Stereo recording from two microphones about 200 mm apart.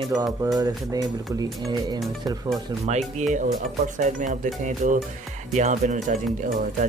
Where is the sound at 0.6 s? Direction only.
20° right (ahead or behind).